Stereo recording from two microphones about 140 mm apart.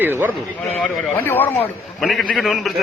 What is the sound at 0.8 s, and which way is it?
Speech, 5° left (ahead or behind).